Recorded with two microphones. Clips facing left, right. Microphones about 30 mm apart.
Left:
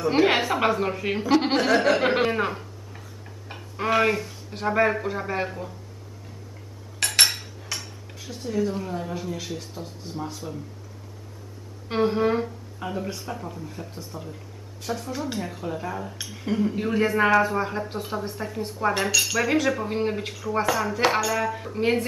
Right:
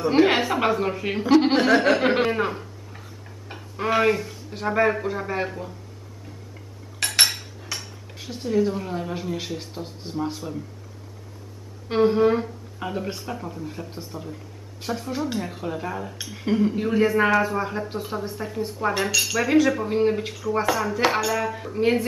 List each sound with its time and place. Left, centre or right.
0.1 s a man's voice: centre
1.5 s speech: centre
1.8 s speech: centre
7.0 s dishes: centre
8.2 s speech: centre
11.9 s a man's voice: centre
12.8 s a man's voice: centre
15.0 s speech: centre
15.2 s a man's voice: centre